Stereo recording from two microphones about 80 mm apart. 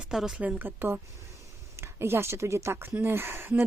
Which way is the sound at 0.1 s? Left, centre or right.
Centre.